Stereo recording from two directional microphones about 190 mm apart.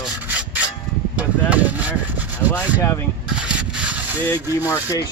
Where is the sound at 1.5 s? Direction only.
5° right (ahead or behind).